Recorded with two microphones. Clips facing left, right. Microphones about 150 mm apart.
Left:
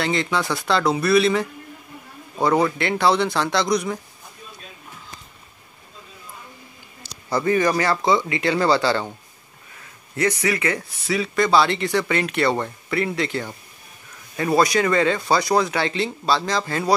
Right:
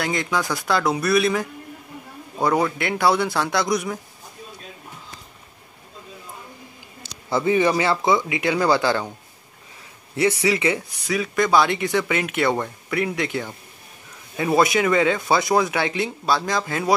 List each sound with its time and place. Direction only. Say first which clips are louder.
0.0 s speech: left 1 dB; centre (ahead or behind)
7.3 s speech: right 1 dB; 10° right (ahead or behind)
10.4 s speech: right 2 dB; 15° right (ahead or behind)
10.8 s speech: left 1 dB; centre (ahead or behind)
11.5 s speech: even; 15° right (ahead or behind)
14.3 s speech: even; 10° right (ahead or behind)